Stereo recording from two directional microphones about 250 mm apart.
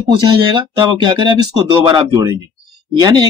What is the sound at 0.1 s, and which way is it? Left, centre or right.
Speech, centre.